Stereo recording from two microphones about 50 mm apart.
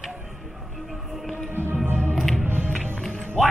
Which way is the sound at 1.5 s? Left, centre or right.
Right.